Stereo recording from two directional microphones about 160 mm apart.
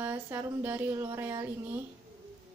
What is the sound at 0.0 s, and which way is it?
A woman's voice, 15° right (ahead or behind).